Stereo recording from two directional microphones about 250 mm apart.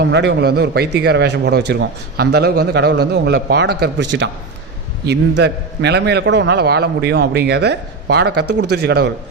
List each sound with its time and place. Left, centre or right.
0.0 s a man's voice: right
5.4 s a man's voice: right